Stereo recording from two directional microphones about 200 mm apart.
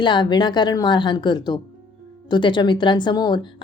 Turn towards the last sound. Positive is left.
turn(degrees=20)  # may be behind; listen again after turning